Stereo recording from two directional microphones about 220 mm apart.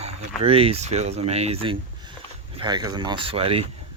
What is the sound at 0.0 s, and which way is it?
Speech, 30° right (ahead or behind).